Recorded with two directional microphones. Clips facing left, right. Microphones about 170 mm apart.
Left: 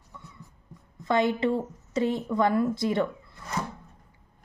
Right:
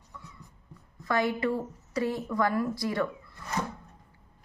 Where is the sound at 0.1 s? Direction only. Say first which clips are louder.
Even; 20° left (ahead or behind).